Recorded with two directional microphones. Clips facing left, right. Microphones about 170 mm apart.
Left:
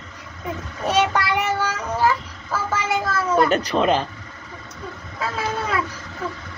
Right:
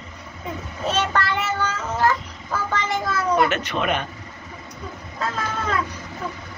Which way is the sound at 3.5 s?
35° left (ahead or behind).